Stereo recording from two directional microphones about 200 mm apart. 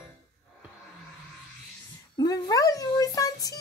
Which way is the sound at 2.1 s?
20° left (ahead or behind).